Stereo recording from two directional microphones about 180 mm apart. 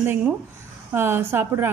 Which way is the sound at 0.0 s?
10° right (ahead or behind).